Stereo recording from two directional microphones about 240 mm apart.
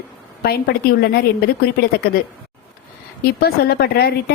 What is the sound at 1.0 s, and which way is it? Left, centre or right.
A woman's voice, left.